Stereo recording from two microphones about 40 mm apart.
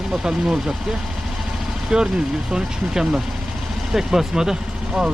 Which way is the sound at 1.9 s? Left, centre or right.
Centre.